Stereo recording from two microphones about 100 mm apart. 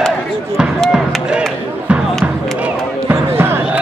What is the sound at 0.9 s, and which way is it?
Chop, 5° right (ahead or behind).